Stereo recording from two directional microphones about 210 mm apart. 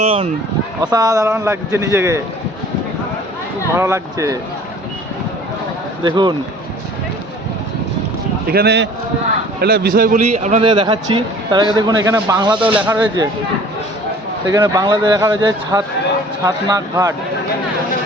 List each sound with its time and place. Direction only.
0.0 s a man's voice: 25° right (ahead or behind)
3.8 s a man's voice: 15° right (ahead or behind)
6.0 s speech: 20° right (ahead or behind)
8.4 s a man's voice: 50° right (ahead or behind)
10.7 s speech: 20° right (ahead or behind)
12.5 s a man's voice: 5° right (ahead or behind)
14.4 s a man's voice: 15° right (ahead or behind)